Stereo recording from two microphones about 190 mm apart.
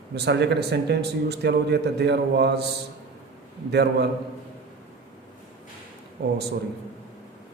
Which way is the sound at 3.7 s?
60° right (ahead or behind).